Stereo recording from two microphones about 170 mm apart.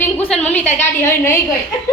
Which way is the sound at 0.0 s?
10° left (ahead or behind).